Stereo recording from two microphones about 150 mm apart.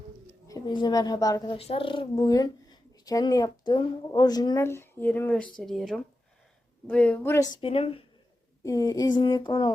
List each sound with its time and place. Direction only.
0.4 s speech: 25° left (ahead or behind)
1.5 s a woman's voice: 40° left (ahead or behind); by 7.4 s 15° left (ahead or behind)
7.5 s speech: 40° left (ahead or behind)
8.6 s speech: 25° left (ahead or behind)